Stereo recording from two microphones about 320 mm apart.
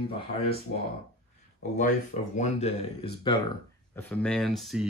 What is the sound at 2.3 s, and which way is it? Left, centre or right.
Speech, left.